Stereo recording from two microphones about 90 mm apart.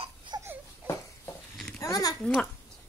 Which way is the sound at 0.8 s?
25° right (ahead or behind).